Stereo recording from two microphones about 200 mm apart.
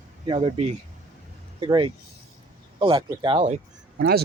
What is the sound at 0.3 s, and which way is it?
Speech, 30° right (ahead or behind).